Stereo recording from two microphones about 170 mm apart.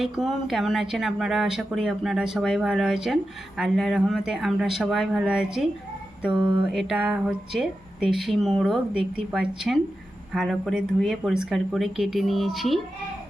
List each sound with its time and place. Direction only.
0.0 s speech: centre (ahead or behind)
6.3 s a sound: 25° right (ahead or behind)
6.7 s speech: centre (ahead or behind)